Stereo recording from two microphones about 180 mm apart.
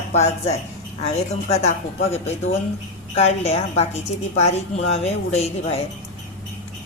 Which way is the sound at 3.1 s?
35° left (ahead or behind).